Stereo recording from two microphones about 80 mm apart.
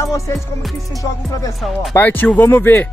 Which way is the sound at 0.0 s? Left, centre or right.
Left.